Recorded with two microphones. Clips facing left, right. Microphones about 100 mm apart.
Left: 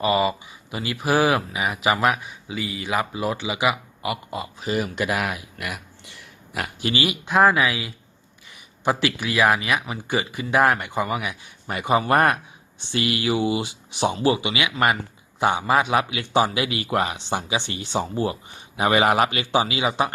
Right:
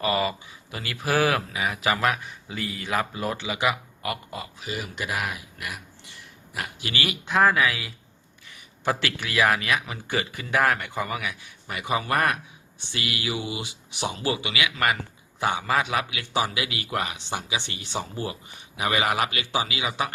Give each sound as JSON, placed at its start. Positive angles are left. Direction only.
{"t": 0.0, "sound": "speech", "side_deg": 15}
{"t": 2.5, "sound": "speech", "side_deg": 5}
{"t": 4.6, "sound": "speech", "side_deg": 45}
{"t": 4.9, "sound": "speech", "side_deg": 70}
{"t": 6.8, "sound": "a man's voice", "side_deg": 20}
{"t": 11.7, "sound": "a man's voice", "side_deg": 35}